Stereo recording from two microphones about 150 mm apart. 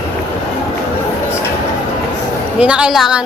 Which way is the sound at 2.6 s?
5° right (ahead or behind).